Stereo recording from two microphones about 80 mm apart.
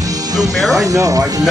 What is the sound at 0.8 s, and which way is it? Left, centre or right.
Speech, right.